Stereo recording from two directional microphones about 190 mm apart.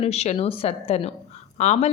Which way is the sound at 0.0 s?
35° left (ahead or behind).